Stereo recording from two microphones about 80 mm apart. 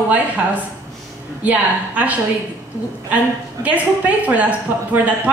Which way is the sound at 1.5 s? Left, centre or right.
Centre.